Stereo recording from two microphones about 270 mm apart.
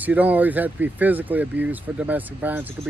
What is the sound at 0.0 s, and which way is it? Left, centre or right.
Speech, centre.